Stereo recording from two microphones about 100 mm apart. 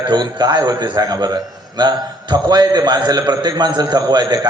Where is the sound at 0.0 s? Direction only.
45° right (ahead or behind).